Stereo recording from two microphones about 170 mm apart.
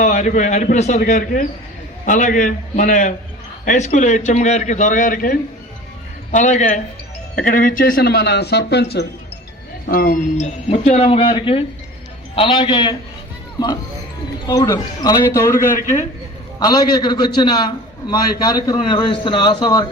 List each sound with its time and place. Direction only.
0.0 s a man's voice: 45° left (ahead or behind); by 9.0 s 75° left (ahead or behind)
9.9 s speech: 55° left (ahead or behind)
10.4 s a man's voice: 40° left (ahead or behind)
14.4 s a man's voice: 20° left (ahead or behind)
15.7 s a man's voice: 45° left (ahead or behind)
16.6 s a man's voice: 25° left (ahead or behind)